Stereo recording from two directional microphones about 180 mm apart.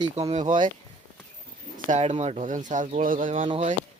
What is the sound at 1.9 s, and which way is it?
Speech, 40° right (ahead or behind).